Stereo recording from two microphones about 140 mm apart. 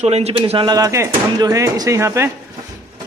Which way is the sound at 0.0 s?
50° right (ahead or behind).